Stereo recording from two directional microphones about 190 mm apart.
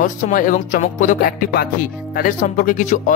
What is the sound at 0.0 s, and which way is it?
Speech, 40° left (ahead or behind).